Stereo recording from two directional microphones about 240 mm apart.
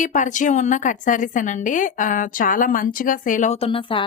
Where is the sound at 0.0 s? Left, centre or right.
Left.